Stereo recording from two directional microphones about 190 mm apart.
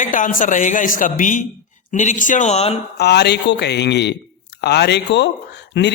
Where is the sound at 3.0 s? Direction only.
60° left (ahead or behind).